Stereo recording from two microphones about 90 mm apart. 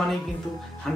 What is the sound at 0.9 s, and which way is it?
Music, 5° left (ahead or behind).